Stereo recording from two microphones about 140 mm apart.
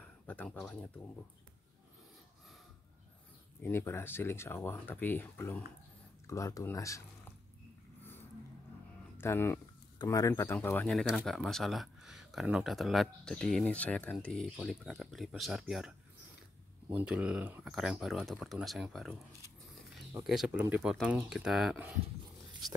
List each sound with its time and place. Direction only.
0.0 s speech: 10° left (ahead or behind)
3.6 s speech: 15° left (ahead or behind)
9.2 s speech: 15° left (ahead or behind)
10.9 s speech: 5° left (ahead or behind)
16.9 s speech: 10° right (ahead or behind)
20.2 s speech: 5° right (ahead or behind)